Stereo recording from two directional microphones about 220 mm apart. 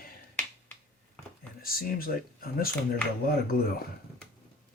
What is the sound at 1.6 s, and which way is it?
Speech, 40° left (ahead or behind).